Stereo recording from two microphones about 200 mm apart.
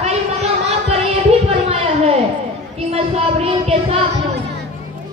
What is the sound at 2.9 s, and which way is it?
Speech, 30° right (ahead or behind).